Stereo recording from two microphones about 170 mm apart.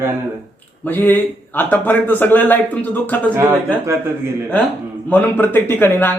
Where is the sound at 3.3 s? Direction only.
15° right (ahead or behind).